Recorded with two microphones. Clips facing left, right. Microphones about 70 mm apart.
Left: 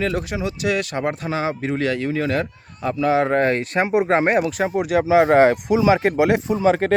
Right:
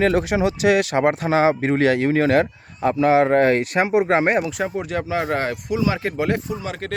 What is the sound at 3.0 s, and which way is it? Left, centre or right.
Speech, right.